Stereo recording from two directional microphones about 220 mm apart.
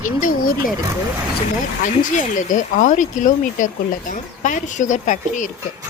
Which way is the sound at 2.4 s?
35° left (ahead or behind).